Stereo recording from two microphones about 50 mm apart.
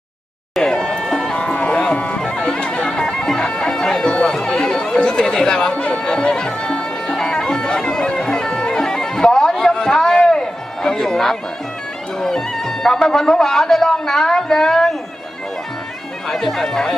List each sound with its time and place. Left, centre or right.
0.5 s music: centre
2.6 s bagpipes: left
4.4 s chatter: centre
10.8 s music: centre
12.2 s speech: centre
16.2 s speech: centre